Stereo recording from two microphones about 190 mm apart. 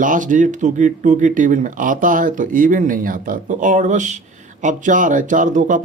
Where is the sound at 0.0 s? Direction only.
45° right (ahead or behind).